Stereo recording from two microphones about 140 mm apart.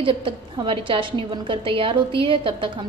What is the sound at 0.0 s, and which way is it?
A woman's voice, 40° right (ahead or behind).